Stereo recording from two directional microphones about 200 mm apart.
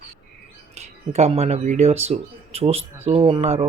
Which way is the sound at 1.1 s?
30° right (ahead or behind).